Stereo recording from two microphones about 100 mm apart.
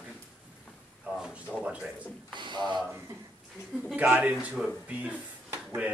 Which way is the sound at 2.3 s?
50° right (ahead or behind).